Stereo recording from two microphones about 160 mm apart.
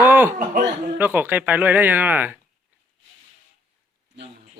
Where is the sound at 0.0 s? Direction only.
15° right (ahead or behind).